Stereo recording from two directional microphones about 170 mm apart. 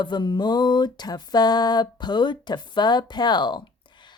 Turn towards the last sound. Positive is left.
turn(degrees=25)  # may be behind; listen again after turning